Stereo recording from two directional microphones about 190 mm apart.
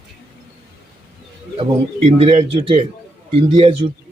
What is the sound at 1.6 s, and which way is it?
Speech, 30° right (ahead or behind).